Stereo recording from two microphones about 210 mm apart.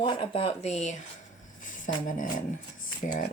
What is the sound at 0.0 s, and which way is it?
Speech, 20° left (ahead or behind).